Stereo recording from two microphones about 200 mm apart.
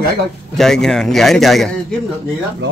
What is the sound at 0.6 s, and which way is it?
Speech, centre (ahead or behind).